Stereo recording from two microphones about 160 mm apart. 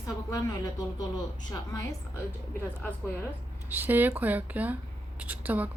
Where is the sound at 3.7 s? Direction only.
10° right (ahead or behind).